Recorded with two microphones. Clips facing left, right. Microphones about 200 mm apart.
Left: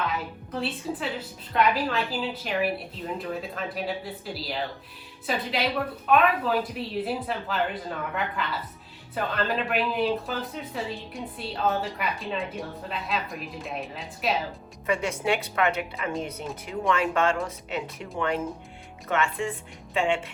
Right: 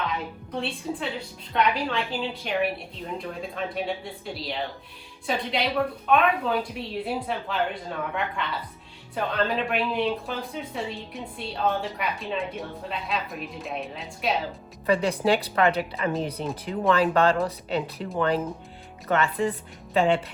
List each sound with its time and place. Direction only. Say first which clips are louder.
0.1 s a woman's voice: right 1 dB; 5° left (ahead or behind)
14.8 s a woman's voice: right 4 dB; 35° right (ahead or behind)